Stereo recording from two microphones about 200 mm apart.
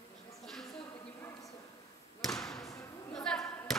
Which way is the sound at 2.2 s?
Centre (ahead or behind).